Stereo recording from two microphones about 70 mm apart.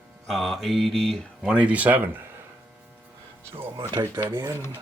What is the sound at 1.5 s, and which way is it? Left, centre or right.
Speech, centre.